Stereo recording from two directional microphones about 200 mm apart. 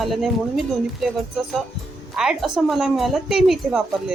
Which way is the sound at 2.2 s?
Centre (ahead or behind).